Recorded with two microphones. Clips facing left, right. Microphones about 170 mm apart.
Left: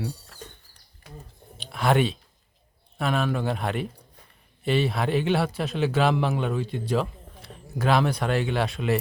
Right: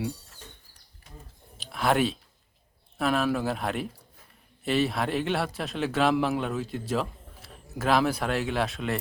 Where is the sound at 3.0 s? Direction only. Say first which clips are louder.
Even; centre (ahead or behind).